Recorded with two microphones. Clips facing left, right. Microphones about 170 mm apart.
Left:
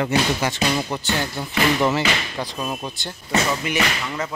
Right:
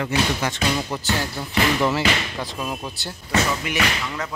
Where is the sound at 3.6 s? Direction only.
Centre (ahead or behind).